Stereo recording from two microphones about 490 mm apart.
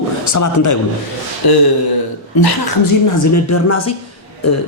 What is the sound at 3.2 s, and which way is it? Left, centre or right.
Speech, left.